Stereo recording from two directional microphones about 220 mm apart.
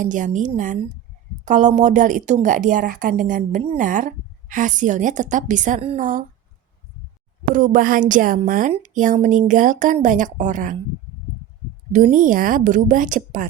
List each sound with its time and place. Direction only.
0.0 s a woman's voice: 35° right (ahead or behind)
7.4 s a woman's voice: 40° right (ahead or behind)
11.9 s a woman's voice: 35° right (ahead or behind)